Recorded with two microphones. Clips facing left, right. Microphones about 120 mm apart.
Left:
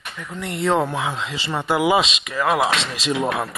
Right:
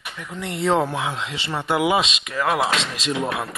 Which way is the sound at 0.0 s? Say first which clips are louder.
Left 1 dB; 10° right (ahead or behind).